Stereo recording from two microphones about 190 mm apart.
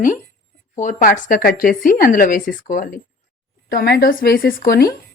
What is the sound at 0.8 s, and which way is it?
A woman's voice, 45° left (ahead or behind).